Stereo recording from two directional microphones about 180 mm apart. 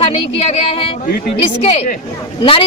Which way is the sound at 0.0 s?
35° left (ahead or behind).